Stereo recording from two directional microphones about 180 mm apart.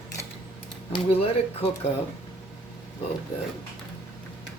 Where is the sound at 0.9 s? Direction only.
35° left (ahead or behind).